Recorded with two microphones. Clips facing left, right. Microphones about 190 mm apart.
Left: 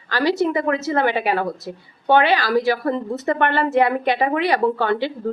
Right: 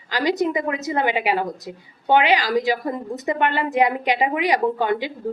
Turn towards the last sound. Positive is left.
turn(degrees=-15)  # may be behind; listen again after turning